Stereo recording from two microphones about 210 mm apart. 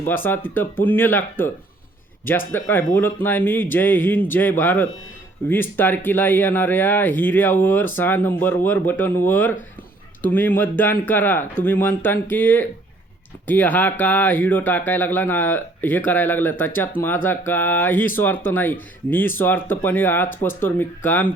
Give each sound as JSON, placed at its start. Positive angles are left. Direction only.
{"t": 0.0, "sound": "speech", "side_deg": 10}
{"t": 2.5, "sound": "speech", "side_deg": 10}